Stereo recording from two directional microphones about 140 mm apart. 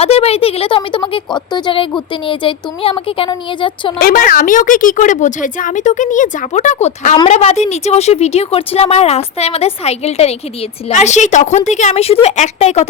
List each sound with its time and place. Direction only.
0.0 s speech: 45° left (ahead or behind)
4.0 s speech: 85° left; by 12.9 s 50° left (ahead or behind)